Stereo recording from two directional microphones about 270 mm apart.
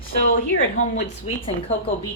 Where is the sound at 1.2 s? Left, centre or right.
Left.